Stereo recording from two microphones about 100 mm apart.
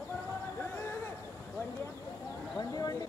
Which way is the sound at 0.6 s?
25° left (ahead or behind).